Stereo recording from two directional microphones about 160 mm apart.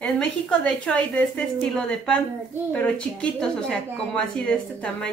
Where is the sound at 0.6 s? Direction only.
10° left (ahead or behind).